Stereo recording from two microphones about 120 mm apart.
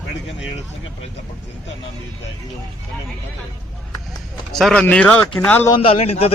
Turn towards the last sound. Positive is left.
turn(degrees=60)  # may be behind; listen again after turning